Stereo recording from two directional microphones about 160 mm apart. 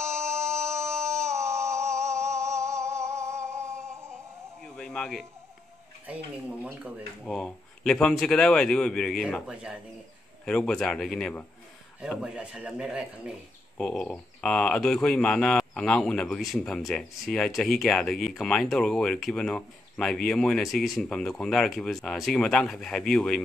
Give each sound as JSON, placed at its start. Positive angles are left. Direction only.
{"t": 0.0, "sound": "a sound", "side_deg": -15}
{"t": 4.6, "sound": "a sound", "side_deg": 5}
{"t": 6.0, "sound": "speech", "side_deg": -10}
{"t": 7.2, "sound": "speech", "side_deg": 5}
{"t": 9.2, "sound": "speech", "side_deg": -5}
{"t": 10.4, "sound": "speech", "side_deg": 5}
{"t": 13.7, "sound": "speech", "side_deg": 5}